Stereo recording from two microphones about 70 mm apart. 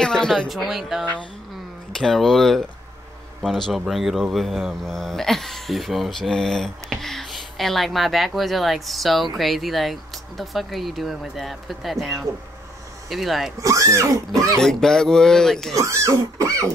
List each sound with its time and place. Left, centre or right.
0.0 s speech: centre
0.5 s speech: centre
2.0 s speech: centre
3.8 s speech: centre
13.6 s speech: right
14.6 s speech: centre
15.7 s speech: right